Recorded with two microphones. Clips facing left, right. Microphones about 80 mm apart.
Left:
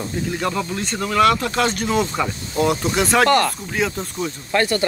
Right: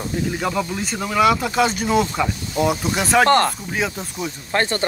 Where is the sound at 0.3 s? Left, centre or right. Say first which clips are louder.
Left 1 dB; centre.